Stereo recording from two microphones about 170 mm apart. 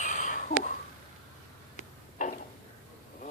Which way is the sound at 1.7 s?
50° left (ahead or behind).